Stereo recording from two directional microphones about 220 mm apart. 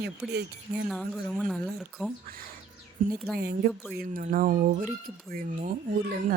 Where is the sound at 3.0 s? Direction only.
35° right (ahead or behind).